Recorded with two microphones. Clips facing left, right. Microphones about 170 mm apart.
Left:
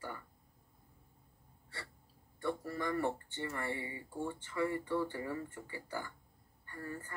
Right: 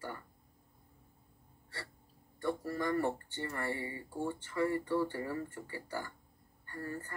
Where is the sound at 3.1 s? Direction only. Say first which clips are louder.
Right 1 dB; 35° right (ahead or behind).